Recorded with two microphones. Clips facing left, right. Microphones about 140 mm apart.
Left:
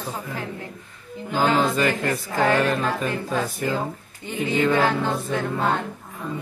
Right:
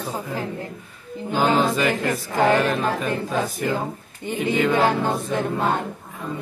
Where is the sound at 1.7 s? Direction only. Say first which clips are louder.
Right 1 dB; 5° right (ahead or behind).